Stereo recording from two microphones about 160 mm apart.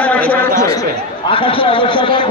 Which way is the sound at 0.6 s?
20° left (ahead or behind).